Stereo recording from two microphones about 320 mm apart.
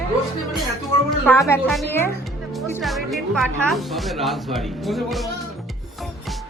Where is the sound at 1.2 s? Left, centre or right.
Centre.